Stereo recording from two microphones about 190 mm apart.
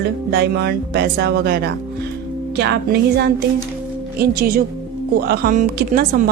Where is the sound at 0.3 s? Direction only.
60° right (ahead or behind).